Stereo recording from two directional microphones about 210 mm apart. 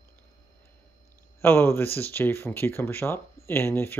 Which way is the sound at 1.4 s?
10° left (ahead or behind).